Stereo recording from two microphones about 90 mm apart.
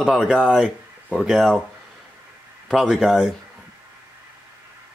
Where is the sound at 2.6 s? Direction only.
Centre (ahead or behind).